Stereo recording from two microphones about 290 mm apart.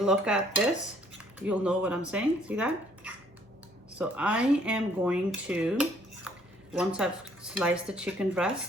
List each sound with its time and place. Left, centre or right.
0.0 s speech: centre